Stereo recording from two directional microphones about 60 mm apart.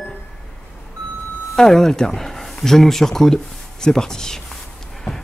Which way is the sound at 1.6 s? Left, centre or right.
Centre.